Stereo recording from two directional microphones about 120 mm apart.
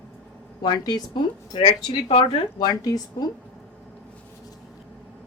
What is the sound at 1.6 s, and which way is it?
A woman's voice, 50° left (ahead or behind).